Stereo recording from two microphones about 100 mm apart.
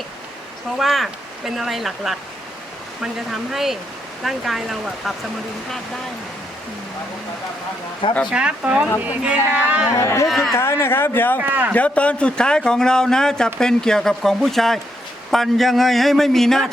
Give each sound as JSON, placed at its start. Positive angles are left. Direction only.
{"t": 0.8, "sound": "a man's voice", "side_deg": 0}
{"t": 3.5, "sound": "a man's voice", "side_deg": -5}
{"t": 8.3, "sound": "speech", "side_deg": -10}
{"t": 9.9, "sound": "speech", "side_deg": 30}
{"t": 10.2, "sound": "a man's voice", "side_deg": 0}
{"t": 10.5, "sound": "speech", "side_deg": 25}
{"t": 11.3, "sound": "speech", "side_deg": -20}
{"t": 11.7, "sound": "a man's voice", "side_deg": 15}